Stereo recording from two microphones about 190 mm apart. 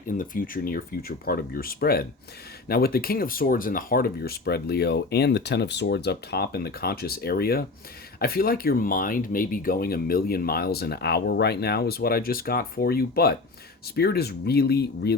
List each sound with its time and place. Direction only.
0.1 s speech: 45° left (ahead or behind)